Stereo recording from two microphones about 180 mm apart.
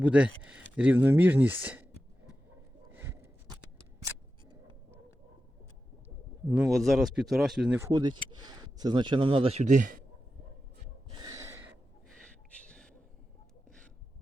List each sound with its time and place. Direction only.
0.0 s speech: 5° right (ahead or behind)
2.9 s a sound: 15° right (ahead or behind)
6.6 s speech: centre (ahead or behind)
7.8 s speech: 20° right (ahead or behind); by 10.0 s 45° right (ahead or behind)
11.2 s gasp: 20° right (ahead or behind)
12.5 s a sound: 5° left (ahead or behind)